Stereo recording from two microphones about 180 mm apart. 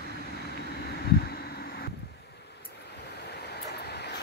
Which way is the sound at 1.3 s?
60° left (ahead or behind).